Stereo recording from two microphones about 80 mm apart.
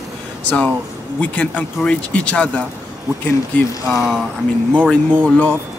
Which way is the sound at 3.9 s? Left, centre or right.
Centre.